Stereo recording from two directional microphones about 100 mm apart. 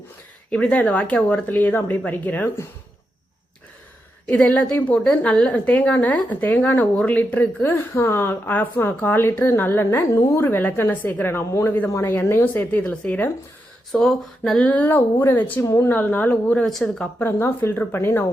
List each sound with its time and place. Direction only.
0.5 s a woman's voice: 15° left (ahead or behind)
4.3 s a woman's voice: 15° left (ahead or behind)
13.9 s speech: centre (ahead or behind)
14.7 s a woman's voice: 20° left (ahead or behind)
16.6 s a woman's voice: 5° left (ahead or behind)
17.2 s a woman's voice: 25° left (ahead or behind)